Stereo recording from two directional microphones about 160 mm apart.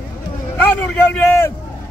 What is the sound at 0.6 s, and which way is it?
Speech, 10° left (ahead or behind).